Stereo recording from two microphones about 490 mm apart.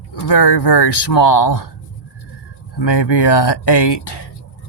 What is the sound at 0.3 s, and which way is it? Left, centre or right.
Speech, left.